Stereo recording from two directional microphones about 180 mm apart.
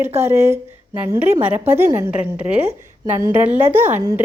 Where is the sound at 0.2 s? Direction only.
15° right (ahead or behind).